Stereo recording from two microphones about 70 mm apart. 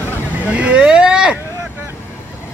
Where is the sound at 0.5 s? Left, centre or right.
Centre.